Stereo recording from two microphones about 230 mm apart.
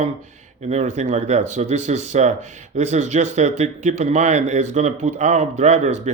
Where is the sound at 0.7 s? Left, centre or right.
Right.